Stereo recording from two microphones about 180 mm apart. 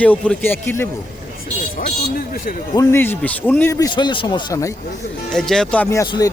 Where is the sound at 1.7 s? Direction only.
50° left (ahead or behind).